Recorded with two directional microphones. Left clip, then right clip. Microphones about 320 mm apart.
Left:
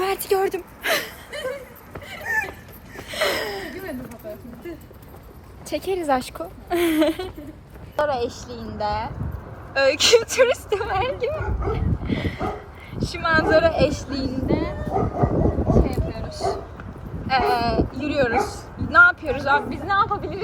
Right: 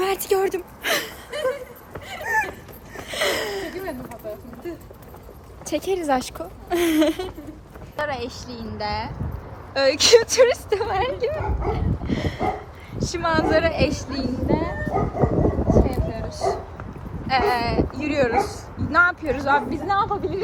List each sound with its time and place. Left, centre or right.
0.0 s a sound: centre
2.3 s dog: right
3.1 s a sound: centre
5.6 s a woman's voice: centre
11.3 s speech: right
12.0 s a sound: centre
13.0 s speech: centre
15.7 s dog: centre
17.2 s speech: centre